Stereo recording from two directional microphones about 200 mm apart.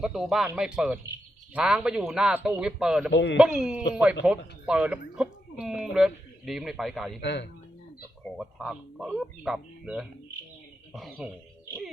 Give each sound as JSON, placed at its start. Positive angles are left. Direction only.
{"t": 0.0, "sound": "speech", "side_deg": 0}
{"t": 3.1, "sound": "a man's voice", "side_deg": 60}
{"t": 3.3, "sound": "speech", "side_deg": -5}
{"t": 7.2, "sound": "a man's voice", "side_deg": 60}
{"t": 8.4, "sound": "speech", "side_deg": 0}